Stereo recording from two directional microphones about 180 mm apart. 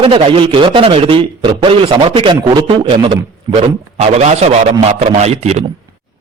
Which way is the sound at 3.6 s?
35° right (ahead or behind).